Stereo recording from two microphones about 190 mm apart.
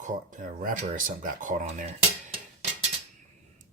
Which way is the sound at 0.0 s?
45° right (ahead or behind).